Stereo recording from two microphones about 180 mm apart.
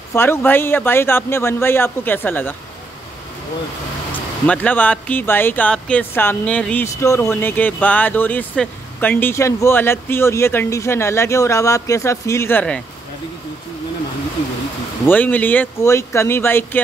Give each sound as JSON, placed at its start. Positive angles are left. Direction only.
{"t": 0.1, "sound": "speech", "side_deg": 15}
{"t": 4.5, "sound": "speech", "side_deg": 10}
{"t": 15.0, "sound": "speech", "side_deg": 10}